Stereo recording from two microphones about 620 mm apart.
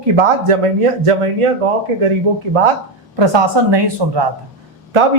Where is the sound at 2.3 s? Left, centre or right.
Right.